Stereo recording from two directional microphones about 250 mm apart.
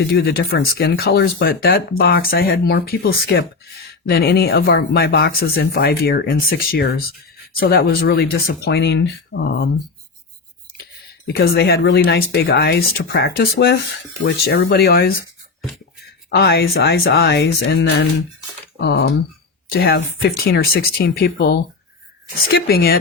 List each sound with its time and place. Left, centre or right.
0.0 s speech: left
11.3 s speech: left
16.3 s speech: left